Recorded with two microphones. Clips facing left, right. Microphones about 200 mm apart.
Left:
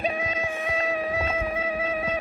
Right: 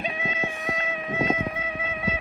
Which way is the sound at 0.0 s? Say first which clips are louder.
Left 3 dB; 35° left (ahead or behind).